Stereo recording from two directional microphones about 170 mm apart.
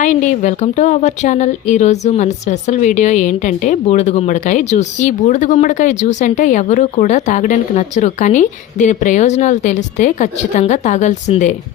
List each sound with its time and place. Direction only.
0.0 s speech: 45° left (ahead or behind)